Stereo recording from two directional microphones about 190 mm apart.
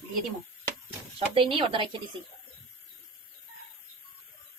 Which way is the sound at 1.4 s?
30° right (ahead or behind).